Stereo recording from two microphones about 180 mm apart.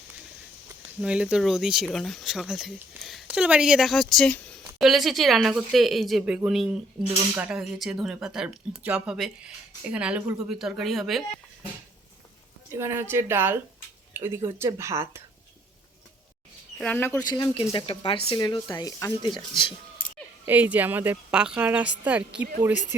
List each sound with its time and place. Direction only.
1.0 s speech: 5° right (ahead or behind)
12.7 s a woman's voice: 15° right (ahead or behind)
16.7 s speech: 5° left (ahead or behind)
17.2 s speech: 20° left (ahead or behind)
20.4 s a woman's voice: 10° right (ahead or behind)